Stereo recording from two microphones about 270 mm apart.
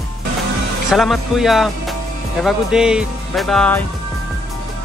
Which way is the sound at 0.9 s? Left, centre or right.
Centre.